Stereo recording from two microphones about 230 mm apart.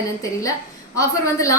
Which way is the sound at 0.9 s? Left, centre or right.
Centre.